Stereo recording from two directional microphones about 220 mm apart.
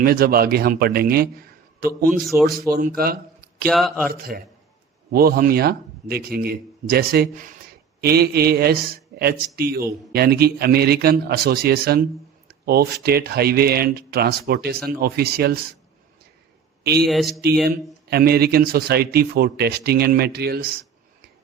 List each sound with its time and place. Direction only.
0.0 s a man's voice: 45° right (ahead or behind)
2.3 s speech: 10° right (ahead or behind)
2.6 s speech: 40° right (ahead or behind)
3.7 s a man's voice: centre (ahead or behind)
4.1 s speech: 40° right (ahead or behind)
16.8 s speech: 45° right (ahead or behind)
17.1 s a man's voice: centre (ahead or behind)
18.1 s speech: 45° right (ahead or behind)